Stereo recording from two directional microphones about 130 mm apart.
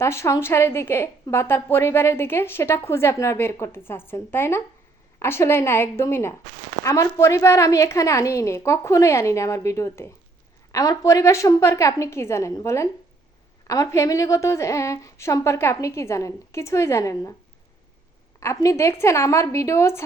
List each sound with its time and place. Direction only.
0.0 s a woman's voice: 20° left (ahead or behind)
18.3 s a woman's voice: 25° left (ahead or behind)